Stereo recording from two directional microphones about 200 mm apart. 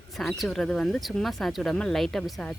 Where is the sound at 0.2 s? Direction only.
Centre (ahead or behind).